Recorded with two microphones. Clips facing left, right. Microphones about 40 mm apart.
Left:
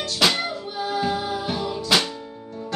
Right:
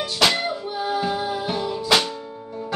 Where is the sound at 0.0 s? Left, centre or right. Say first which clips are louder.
Right 1 dB; centre.